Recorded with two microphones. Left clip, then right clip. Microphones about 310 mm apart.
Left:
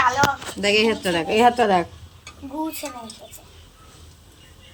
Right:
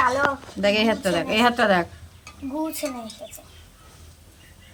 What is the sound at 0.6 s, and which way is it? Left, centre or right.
Speech, centre.